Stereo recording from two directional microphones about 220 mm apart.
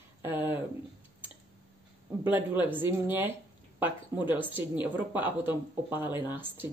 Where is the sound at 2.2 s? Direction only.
10° right (ahead or behind).